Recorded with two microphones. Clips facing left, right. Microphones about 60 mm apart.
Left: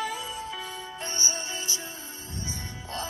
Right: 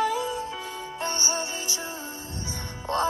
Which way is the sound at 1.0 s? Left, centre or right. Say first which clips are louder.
Right 5 dB; right.